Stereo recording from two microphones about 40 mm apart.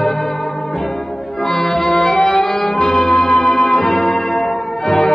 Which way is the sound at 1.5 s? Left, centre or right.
Centre.